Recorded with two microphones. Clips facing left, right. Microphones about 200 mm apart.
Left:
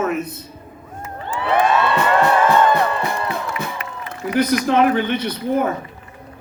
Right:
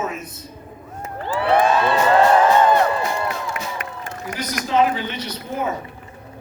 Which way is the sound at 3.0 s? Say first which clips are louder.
Left 1 dB; 60° left (ahead or behind).